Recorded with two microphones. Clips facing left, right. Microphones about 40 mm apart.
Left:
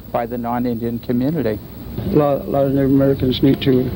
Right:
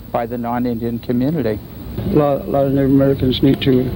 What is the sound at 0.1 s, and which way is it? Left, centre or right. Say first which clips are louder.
Speech: right 1 dB; centre.